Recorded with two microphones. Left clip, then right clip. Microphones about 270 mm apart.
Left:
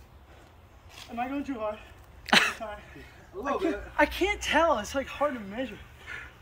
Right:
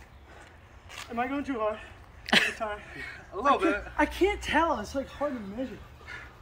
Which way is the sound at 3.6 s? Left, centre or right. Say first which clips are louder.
Even; centre.